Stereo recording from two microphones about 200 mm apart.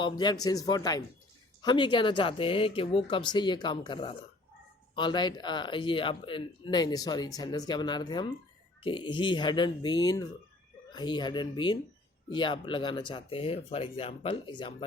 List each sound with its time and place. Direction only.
0.0 s speech: 20° left (ahead or behind)